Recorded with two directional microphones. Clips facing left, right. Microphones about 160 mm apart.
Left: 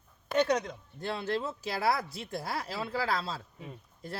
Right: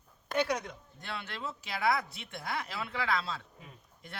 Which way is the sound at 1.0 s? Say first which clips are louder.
Left 8 dB; 35° left (ahead or behind).